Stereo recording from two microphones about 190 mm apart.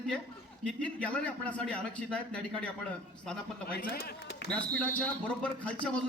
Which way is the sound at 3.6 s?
50° left (ahead or behind).